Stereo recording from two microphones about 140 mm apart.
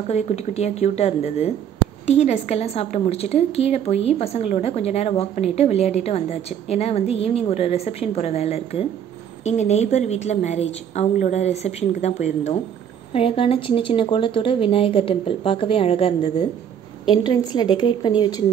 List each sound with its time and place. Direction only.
0.1 s a woman's voice: 50° left (ahead or behind)
13.1 s speech: 40° left (ahead or behind)